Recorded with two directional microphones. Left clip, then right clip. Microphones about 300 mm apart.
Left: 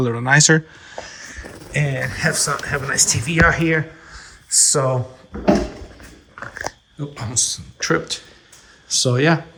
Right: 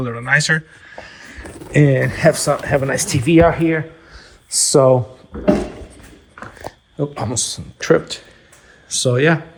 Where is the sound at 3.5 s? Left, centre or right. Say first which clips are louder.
Right 1 dB; centre.